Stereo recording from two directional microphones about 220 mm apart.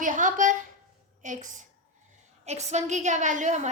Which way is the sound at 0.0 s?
35° right (ahead or behind).